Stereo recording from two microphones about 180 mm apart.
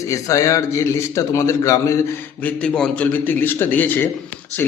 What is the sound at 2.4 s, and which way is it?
A man's voice, 5° left (ahead or behind).